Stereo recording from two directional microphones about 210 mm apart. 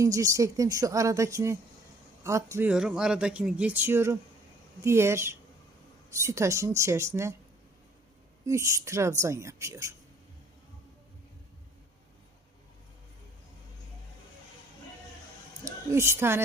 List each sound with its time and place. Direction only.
0.0 s speech: 15° right (ahead or behind)
8.4 s speech: 15° right (ahead or behind)
15.6 s a woman's voice: 15° right (ahead or behind)